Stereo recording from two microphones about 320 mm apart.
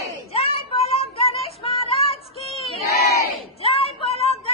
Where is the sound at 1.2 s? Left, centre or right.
Centre.